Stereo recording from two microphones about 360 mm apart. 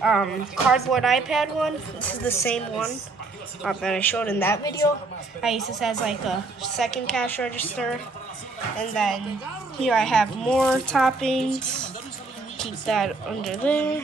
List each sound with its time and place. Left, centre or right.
0.0 s speech: centre